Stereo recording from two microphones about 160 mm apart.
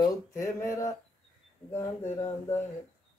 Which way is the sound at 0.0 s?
20° left (ahead or behind).